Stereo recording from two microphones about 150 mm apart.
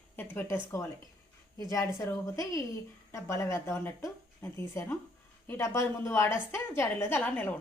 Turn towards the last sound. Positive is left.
turn(degrees=10)  # may be behind; listen again after turning